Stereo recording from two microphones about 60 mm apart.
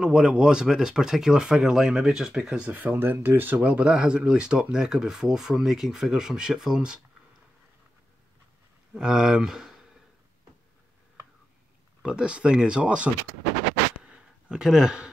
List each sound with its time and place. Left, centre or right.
0.0 s speech: centre
2.7 s speech: right
3.6 s speech: centre
8.9 s speech: centre
12.0 s speech: centre
14.0 s a sound: centre